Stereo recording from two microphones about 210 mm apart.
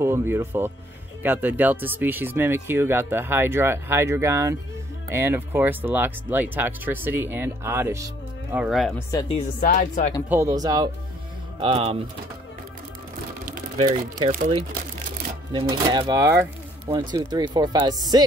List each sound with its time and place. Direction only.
0.0 s speech: 10° right (ahead or behind)
8.6 s speech: centre (ahead or behind)
9.6 s speech: 40° left (ahead or behind)
10.3 s speech: 15° right (ahead or behind)
15.5 s speech: 25° right (ahead or behind)